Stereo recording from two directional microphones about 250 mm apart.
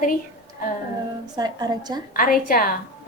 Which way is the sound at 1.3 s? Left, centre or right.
Centre.